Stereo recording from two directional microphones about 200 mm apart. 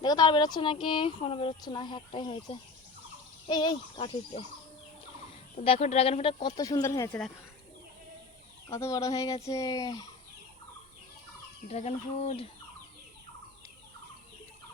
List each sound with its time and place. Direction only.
0.0 s speech: 20° left (ahead or behind)
5.5 s speech: 30° left (ahead or behind); by 7.2 s 15° left (ahead or behind)
8.7 s speech: 15° left (ahead or behind)
11.7 s speech: 30° left (ahead or behind)